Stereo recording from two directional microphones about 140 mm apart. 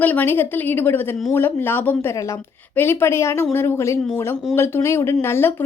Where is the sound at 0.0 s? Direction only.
10° left (ahead or behind).